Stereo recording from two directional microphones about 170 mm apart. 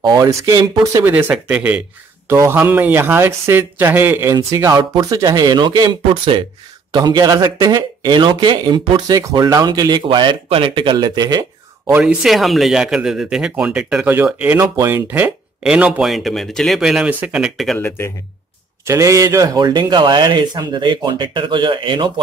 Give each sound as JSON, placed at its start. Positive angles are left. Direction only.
{"t": 0.0, "sound": "speech", "side_deg": -20}
{"t": 1.1, "sound": "speech", "side_deg": -10}
{"t": 12.0, "sound": "speech", "side_deg": -5}
{"t": 17.7, "sound": "a man's voice", "side_deg": 15}
{"t": 18.9, "sound": "speech", "side_deg": -20}